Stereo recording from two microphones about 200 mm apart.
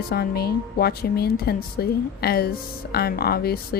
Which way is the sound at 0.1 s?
50° left (ahead or behind).